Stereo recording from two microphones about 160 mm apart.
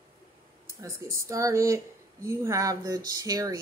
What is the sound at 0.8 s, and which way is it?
Speech, 20° right (ahead or behind).